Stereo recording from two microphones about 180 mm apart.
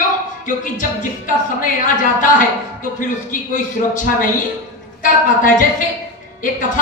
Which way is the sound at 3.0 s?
45° left (ahead or behind).